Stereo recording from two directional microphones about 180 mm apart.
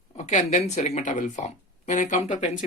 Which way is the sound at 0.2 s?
40° left (ahead or behind).